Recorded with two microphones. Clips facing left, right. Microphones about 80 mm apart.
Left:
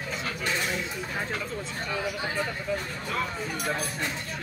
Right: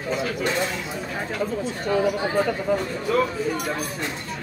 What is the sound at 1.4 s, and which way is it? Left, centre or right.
Speech, right.